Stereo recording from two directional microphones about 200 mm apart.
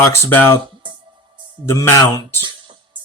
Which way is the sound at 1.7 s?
15° left (ahead or behind).